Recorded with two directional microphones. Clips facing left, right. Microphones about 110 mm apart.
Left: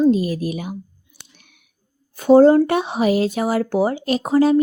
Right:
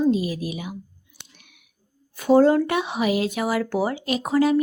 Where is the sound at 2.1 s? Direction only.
30° left (ahead or behind).